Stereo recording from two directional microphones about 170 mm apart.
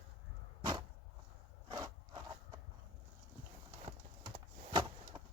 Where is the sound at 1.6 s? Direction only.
25° right (ahead or behind).